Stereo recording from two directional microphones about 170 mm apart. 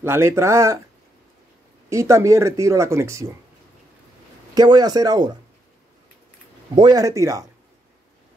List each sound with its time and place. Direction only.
0.0 s speech: 15° right (ahead or behind)
1.9 s speech: 15° right (ahead or behind)
4.6 s speech: 25° right (ahead or behind)
6.7 s speech: 25° right (ahead or behind)